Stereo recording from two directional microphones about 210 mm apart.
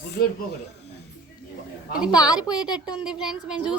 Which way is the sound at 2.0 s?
5° right (ahead or behind).